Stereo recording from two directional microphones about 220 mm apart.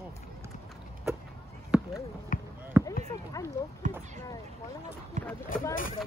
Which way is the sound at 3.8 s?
35° right (ahead or behind).